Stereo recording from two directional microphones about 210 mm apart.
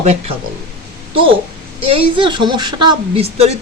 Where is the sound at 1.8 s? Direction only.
25° right (ahead or behind).